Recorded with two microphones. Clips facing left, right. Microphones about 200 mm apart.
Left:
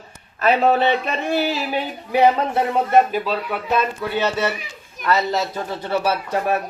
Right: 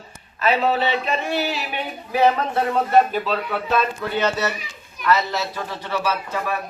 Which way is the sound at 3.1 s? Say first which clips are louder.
Left 1 dB; 10° left (ahead or behind).